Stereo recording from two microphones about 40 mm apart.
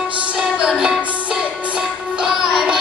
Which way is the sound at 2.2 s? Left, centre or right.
Centre.